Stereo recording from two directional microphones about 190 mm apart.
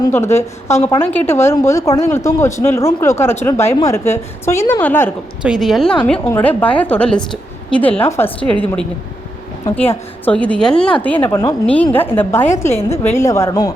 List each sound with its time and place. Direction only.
0.0 s speech: 15° left (ahead or behind)
5.4 s speech: centre (ahead or behind)
9.9 s speech: 10° left (ahead or behind)